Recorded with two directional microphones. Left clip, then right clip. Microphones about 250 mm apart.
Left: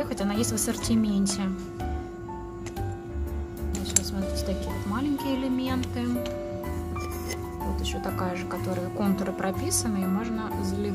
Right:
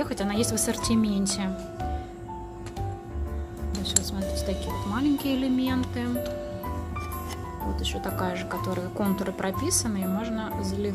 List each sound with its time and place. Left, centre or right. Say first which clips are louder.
0.0 s a woman's voice: right 1 dB; centre
4.4 s speech: right 1 dB; centre
7.8 s speech: right 2 dB; centre